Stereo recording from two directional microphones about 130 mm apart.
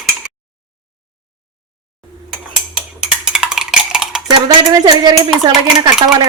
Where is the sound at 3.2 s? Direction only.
5° right (ahead or behind).